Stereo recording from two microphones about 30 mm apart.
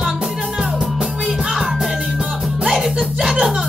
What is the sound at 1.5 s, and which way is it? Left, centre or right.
Music, centre.